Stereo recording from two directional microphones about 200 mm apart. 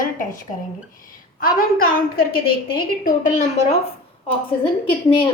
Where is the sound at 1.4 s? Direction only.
45° left (ahead or behind).